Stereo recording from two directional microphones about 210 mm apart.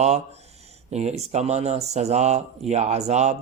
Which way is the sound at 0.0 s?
30° right (ahead or behind).